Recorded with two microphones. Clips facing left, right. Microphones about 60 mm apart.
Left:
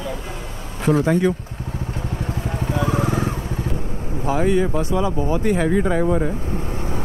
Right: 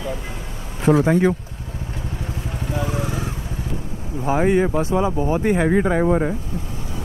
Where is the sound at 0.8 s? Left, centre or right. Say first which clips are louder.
Right 2 dB; right.